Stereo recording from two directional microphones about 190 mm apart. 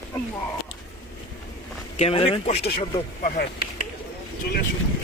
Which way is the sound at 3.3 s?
50° left (ahead or behind).